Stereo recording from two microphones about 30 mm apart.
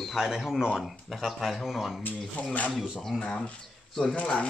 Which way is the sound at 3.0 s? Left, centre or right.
Centre.